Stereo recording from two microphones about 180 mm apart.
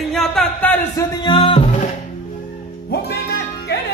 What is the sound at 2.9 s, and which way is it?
Music, 65° left (ahead or behind).